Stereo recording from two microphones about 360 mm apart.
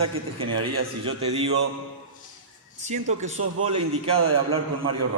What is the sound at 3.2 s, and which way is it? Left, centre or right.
Speech, centre.